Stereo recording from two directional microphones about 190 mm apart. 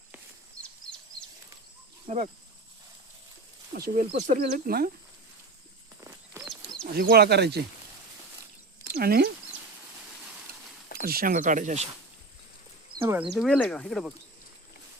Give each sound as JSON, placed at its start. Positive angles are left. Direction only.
{"t": 2.0, "sound": "speech", "side_deg": -40}
{"t": 3.8, "sound": "speech", "side_deg": -50}
{"t": 6.8, "sound": "speech", "side_deg": -50}
{"t": 8.9, "sound": "speech", "side_deg": -50}
{"t": 10.5, "sound": "a sound", "side_deg": -50}
{"t": 11.0, "sound": "speech", "side_deg": -50}
{"t": 13.1, "sound": "speech", "side_deg": -5}